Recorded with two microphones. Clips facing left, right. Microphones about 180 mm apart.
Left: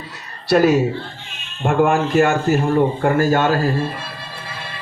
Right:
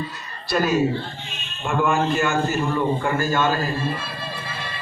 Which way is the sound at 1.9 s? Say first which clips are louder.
Left 5 dB; 70° left (ahead or behind).